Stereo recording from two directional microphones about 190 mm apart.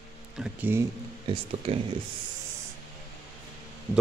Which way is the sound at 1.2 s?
30° right (ahead or behind).